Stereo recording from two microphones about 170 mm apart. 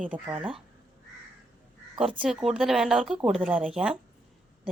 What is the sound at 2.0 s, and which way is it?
A woman's voice, 5° right (ahead or behind).